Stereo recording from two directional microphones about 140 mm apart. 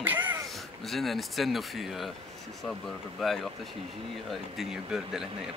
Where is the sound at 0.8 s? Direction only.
Centre (ahead or behind).